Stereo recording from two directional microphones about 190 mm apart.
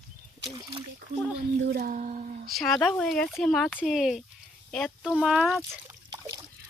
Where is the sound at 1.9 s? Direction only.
40° right (ahead or behind).